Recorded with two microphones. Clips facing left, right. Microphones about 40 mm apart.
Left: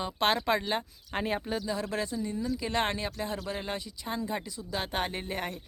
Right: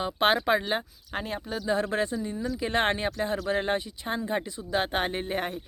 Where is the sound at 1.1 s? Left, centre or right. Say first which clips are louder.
Left 1 dB; centre.